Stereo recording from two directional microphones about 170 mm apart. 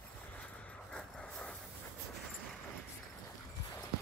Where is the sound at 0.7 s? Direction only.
5° left (ahead or behind).